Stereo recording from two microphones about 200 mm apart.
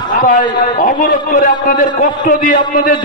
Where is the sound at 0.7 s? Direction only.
40° left (ahead or behind).